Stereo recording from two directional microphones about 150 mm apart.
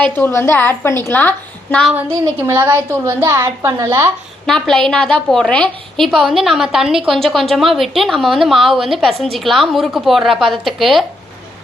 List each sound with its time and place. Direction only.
0.0 s a woman's voice: 15° left (ahead or behind)
1.9 s a woman's voice: 15° right (ahead or behind)
4.4 s a woman's voice: 5° left (ahead or behind)